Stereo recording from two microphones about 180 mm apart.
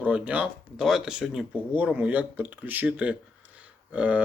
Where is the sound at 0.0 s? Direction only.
10° right (ahead or behind).